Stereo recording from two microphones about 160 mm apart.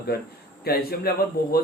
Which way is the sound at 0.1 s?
80° left.